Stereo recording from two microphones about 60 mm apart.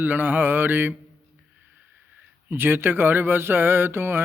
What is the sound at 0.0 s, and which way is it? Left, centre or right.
Speech, right.